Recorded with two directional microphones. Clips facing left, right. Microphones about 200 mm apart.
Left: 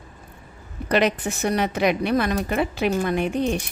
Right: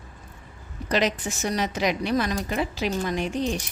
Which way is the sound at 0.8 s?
60° left (ahead or behind).